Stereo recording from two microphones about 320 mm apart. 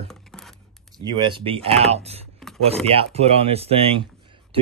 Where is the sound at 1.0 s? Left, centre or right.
Centre.